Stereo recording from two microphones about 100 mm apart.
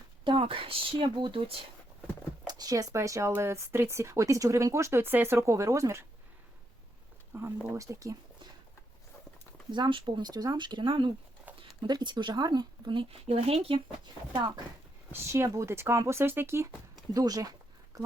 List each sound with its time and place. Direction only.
0.3 s speech: 60° right (ahead or behind)
2.5 s speech: 40° right (ahead or behind)
7.3 s speech: 30° right (ahead or behind)
9.7 s speech: 50° right (ahead or behind)
11.5 s a sound: 15° right (ahead or behind)
11.8 s speech: 50° right (ahead or behind)
13.2 s speech: 90° right
15.1 s speech: 25° right (ahead or behind)
17.2 s speech: 40° right (ahead or behind)